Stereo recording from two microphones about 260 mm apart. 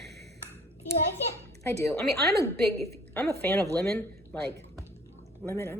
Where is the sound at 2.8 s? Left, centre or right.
Centre.